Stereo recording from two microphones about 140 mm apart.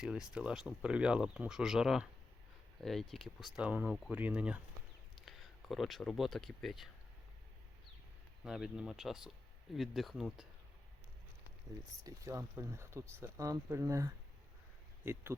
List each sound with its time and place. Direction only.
0.0 s speech: 5° right (ahead or behind)
8.4 s speech: 5° right (ahead or behind)
12.0 s speech: 25° right (ahead or behind)